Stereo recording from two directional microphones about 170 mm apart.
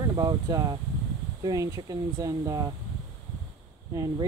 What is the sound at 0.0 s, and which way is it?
Speech, 25° right (ahead or behind).